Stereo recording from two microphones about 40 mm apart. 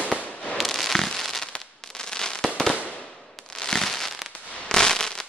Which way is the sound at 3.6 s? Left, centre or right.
Centre.